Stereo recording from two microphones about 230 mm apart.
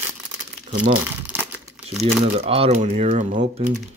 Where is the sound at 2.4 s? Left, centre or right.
Right.